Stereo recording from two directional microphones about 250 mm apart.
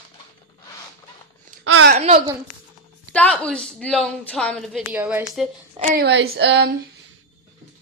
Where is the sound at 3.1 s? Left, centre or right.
Centre.